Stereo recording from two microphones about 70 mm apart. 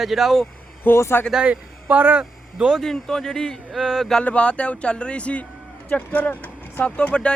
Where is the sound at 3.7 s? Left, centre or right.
Centre.